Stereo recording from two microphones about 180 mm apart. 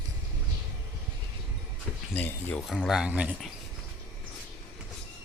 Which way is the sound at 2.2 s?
5° left (ahead or behind).